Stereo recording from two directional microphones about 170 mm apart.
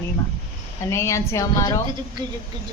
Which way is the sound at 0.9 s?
15° left (ahead or behind).